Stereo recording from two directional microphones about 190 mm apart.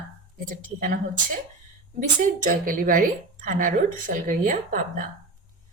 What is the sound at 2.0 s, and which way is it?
A woman's voice, 45° right (ahead or behind).